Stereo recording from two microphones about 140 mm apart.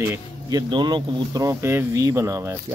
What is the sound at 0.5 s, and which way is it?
Speech, 30° right (ahead or behind).